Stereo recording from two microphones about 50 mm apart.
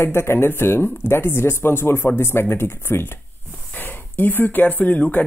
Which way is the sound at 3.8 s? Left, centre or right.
Left.